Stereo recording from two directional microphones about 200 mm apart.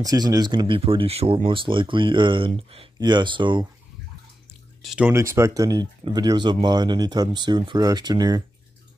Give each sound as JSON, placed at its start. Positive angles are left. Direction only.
{"t": 0.0, "sound": "speech", "side_deg": -20}
{"t": 4.8, "sound": "speech", "side_deg": -5}